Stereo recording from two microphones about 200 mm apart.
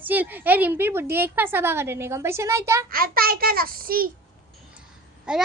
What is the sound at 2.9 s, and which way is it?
A child's voice, 45° right (ahead or behind).